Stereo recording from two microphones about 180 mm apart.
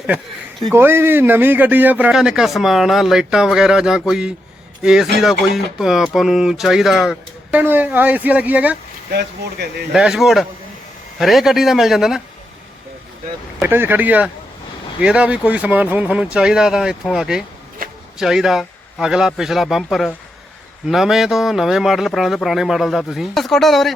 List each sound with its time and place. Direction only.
0.7 s speech: 10° right (ahead or behind)
9.9 s speech: 5° right (ahead or behind)
13.6 s speech: 10° right (ahead or behind)
17.8 s a sound: 50° right (ahead or behind)
18.2 s speech: 5° right (ahead or behind)